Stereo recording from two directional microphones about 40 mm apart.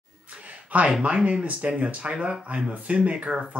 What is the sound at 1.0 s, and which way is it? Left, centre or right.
Speech, right.